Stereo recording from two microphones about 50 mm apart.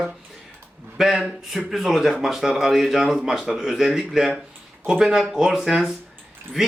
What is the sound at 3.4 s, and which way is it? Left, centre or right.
Speech, centre.